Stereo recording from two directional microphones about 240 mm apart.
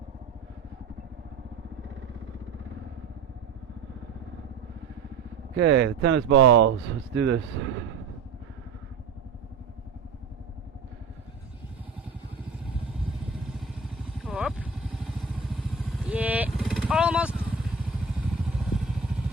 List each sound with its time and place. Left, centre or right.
5.5 s speech: right
13.5 s vehicle: centre